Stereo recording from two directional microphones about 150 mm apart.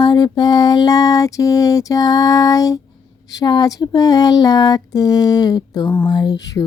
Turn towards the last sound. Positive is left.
turn(degrees=25)  # may be behind; listen again after turning